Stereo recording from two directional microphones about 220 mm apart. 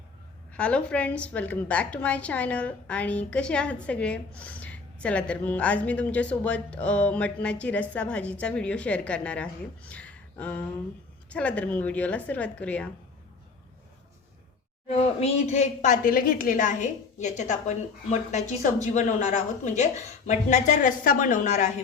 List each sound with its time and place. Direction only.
0.5 s a woman's voice: 5° left (ahead or behind)
9.9 s a sound: 5° left (ahead or behind)
11.3 s a woman's voice: 5° left (ahead or behind)
14.8 s a woman's voice: 30° left (ahead or behind)